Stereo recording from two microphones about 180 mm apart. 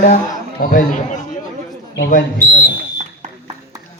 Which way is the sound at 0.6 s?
50° left (ahead or behind).